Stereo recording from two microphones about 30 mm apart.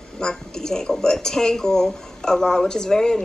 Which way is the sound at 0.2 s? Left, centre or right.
Left.